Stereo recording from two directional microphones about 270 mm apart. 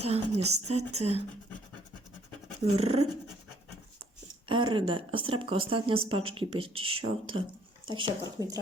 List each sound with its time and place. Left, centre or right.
0.1 s speech: right
2.6 s speech: right
4.4 s speech: centre